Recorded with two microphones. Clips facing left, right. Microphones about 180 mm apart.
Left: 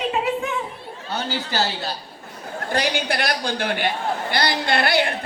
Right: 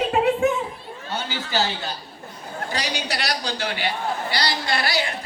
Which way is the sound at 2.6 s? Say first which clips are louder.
Left 6 dB; 55° left (ahead or behind).